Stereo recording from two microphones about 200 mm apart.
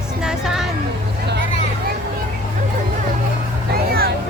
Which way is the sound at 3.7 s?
50° right (ahead or behind).